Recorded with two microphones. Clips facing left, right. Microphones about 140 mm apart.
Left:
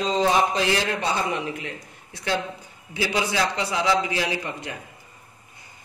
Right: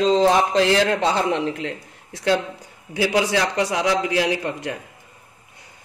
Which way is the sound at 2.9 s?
70° right (ahead or behind).